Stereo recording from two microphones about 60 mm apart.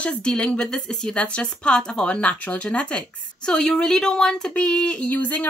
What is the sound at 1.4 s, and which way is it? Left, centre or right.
Speech, centre.